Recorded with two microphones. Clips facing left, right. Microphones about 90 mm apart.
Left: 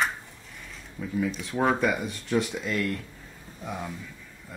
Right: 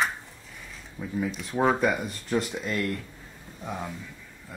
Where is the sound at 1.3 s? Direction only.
5° right (ahead or behind).